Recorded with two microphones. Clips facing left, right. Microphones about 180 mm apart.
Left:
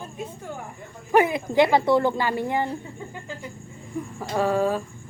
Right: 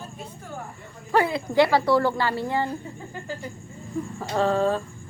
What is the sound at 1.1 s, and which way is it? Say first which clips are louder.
A woman's voice: left 3 dB; 20° left (ahead or behind).